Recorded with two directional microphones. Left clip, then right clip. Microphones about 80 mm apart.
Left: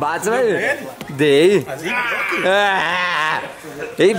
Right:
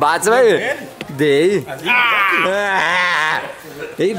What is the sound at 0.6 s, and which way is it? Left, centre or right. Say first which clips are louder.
Speech: left 1 dB; centre.